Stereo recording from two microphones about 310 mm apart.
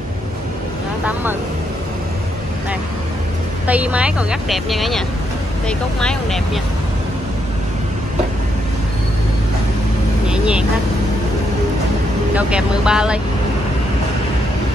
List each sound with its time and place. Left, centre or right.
3.6 s speech: centre
10.2 s vehicle: centre
12.4 s speech: centre